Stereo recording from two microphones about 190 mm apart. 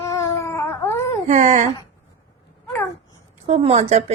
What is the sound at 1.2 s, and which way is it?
Speech, 40° right (ahead or behind).